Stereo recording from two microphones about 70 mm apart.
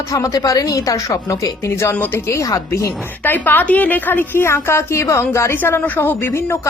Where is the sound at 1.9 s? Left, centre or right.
Left.